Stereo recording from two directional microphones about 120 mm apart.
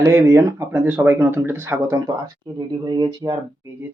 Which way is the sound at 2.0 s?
35° right (ahead or behind).